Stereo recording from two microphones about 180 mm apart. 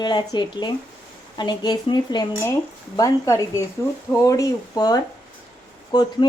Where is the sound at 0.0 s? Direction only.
25° left (ahead or behind).